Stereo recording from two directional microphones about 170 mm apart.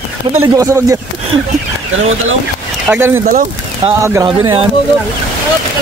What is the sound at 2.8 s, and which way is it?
Speech, 15° right (ahead or behind).